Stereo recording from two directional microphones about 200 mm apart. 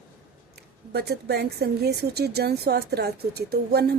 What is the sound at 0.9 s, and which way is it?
A woman's voice, 55° right (ahead or behind).